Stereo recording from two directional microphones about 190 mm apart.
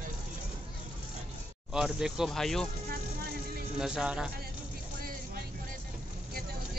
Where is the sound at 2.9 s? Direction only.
50° right (ahead or behind).